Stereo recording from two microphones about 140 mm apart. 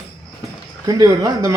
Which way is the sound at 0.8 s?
30° right (ahead or behind).